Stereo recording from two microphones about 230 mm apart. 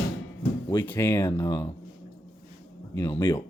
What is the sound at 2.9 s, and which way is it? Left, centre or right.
Speech, centre.